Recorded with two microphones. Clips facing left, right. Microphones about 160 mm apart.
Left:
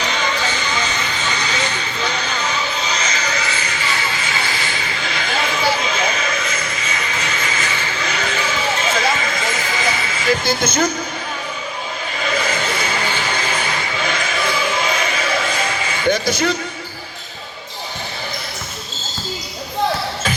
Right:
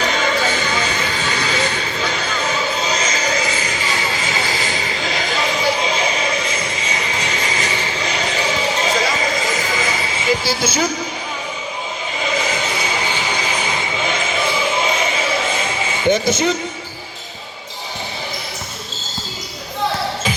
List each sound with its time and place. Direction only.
0.0 s music: 45° right (ahead or behind)
3.8 s vehicle: 20° right (ahead or behind)
4.0 s vehicle: 40° right (ahead or behind)
4.9 s a sound: 40° right (ahead or behind)
9.8 s vehicle: 40° right (ahead or behind)
10.2 s speech: 10° right (ahead or behind)
12.2 s a sound: 15° right (ahead or behind)